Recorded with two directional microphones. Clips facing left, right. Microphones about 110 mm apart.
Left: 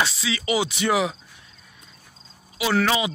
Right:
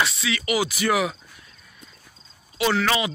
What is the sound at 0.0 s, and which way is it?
Speech, 30° left (ahead or behind).